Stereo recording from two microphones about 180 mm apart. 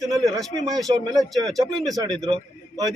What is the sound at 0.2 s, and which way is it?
Speech, centre (ahead or behind).